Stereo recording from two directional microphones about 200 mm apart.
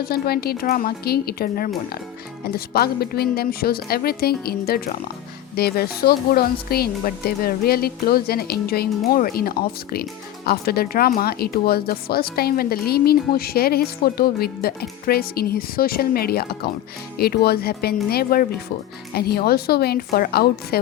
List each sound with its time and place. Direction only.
0.0 s speech: 50° left (ahead or behind)